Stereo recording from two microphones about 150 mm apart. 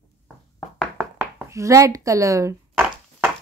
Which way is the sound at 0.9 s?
15° right (ahead or behind).